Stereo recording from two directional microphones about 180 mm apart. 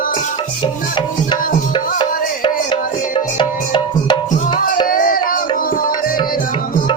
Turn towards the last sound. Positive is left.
turn(degrees=50)  # may be behind; listen again after turning